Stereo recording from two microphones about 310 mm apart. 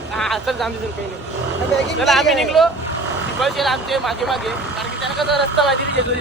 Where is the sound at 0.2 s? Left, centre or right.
Centre.